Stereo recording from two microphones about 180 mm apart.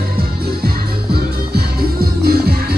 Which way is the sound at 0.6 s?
60° right (ahead or behind).